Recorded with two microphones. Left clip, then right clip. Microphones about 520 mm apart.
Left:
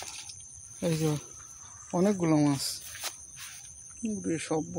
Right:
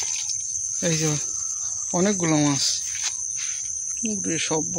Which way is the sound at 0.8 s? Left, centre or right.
Left.